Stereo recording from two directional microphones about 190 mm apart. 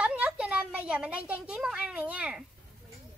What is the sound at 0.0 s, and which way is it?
A woman's voice, 5° right (ahead or behind).